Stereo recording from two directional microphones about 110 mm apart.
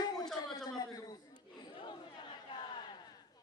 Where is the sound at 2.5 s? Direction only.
45° left (ahead or behind).